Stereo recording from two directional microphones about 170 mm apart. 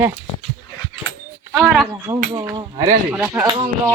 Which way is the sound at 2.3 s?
25° right (ahead or behind).